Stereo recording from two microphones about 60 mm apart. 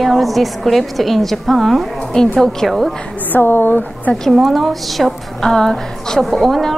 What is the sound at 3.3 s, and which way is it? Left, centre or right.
Speech, left.